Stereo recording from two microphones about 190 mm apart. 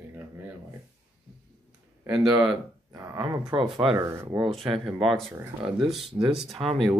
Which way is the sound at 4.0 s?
15° right (ahead or behind).